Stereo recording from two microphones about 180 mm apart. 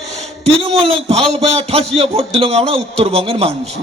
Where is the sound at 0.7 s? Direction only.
35° right (ahead or behind).